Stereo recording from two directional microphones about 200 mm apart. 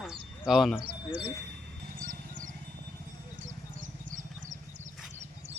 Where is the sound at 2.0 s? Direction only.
40° right (ahead or behind).